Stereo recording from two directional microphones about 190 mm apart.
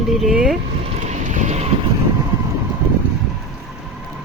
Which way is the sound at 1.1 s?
40° right (ahead or behind).